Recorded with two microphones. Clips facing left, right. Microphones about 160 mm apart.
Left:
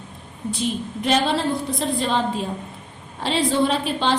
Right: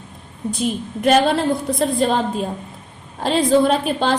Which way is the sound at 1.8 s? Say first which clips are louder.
Right 4 dB; 45° right (ahead or behind).